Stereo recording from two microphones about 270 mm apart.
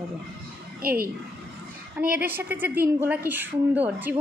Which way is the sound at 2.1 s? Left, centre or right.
Centre.